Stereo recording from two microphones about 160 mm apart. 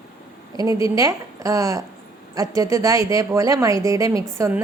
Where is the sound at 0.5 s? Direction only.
20° right (ahead or behind).